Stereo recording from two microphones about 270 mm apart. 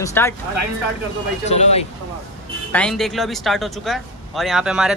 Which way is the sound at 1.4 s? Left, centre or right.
Left.